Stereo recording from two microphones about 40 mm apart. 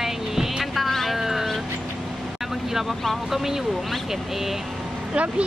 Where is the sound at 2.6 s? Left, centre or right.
Centre.